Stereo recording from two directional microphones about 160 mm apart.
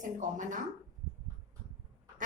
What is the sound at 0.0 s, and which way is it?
Speech, 55° right (ahead or behind).